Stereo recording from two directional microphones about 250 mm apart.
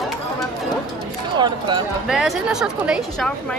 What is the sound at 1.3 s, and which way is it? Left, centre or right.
Speech, centre.